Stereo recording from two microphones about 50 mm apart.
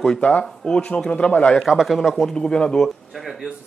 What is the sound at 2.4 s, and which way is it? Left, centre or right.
Speech, centre.